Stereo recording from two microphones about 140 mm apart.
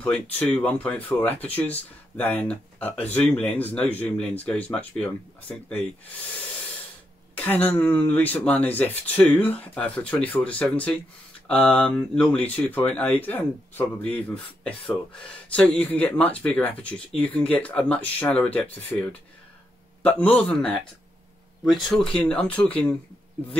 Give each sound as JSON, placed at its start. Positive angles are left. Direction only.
{"t": 0.0, "sound": "speech", "side_deg": 10}
{"t": 7.3, "sound": "speech", "side_deg": 10}
{"t": 20.0, "sound": "speech", "side_deg": 10}